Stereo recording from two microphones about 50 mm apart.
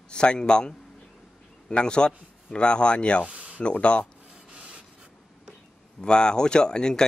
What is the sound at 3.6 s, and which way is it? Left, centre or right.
Speech, left.